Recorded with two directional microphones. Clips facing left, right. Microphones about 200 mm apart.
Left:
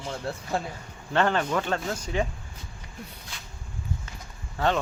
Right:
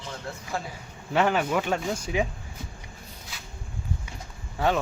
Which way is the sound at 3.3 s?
5° right (ahead or behind).